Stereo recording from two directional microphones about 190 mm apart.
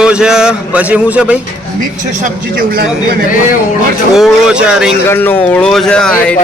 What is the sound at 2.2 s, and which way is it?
Speech, 50° right (ahead or behind).